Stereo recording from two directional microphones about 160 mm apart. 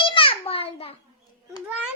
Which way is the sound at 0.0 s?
35° left (ahead or behind).